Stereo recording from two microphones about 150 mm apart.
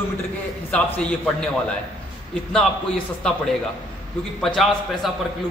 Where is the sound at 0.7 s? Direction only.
10° left (ahead or behind).